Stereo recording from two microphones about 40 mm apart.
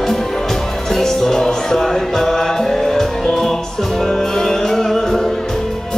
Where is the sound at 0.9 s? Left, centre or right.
Centre.